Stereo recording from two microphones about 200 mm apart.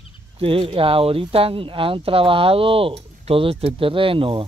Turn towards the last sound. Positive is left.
turn(degrees=-25)  # may be behind; listen again after turning